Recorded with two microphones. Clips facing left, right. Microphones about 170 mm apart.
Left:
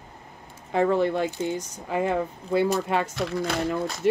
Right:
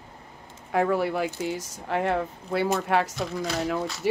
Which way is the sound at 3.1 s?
65° left (ahead or behind).